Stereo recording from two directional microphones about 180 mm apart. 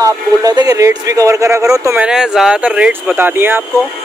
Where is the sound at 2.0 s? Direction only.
5° right (ahead or behind).